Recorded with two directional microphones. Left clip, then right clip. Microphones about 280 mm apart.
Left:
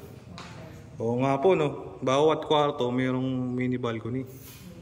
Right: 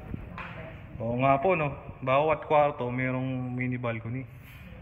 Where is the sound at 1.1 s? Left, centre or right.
Centre.